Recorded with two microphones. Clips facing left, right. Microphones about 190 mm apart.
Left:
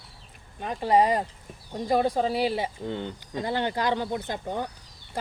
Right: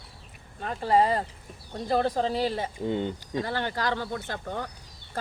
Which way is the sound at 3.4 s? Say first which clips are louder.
Left 3 dB; 20° left (ahead or behind).